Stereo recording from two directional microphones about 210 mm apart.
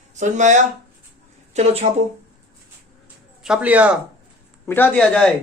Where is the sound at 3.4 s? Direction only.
5° right (ahead or behind).